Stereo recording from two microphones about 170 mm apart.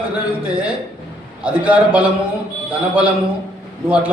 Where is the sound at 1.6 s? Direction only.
10° right (ahead or behind).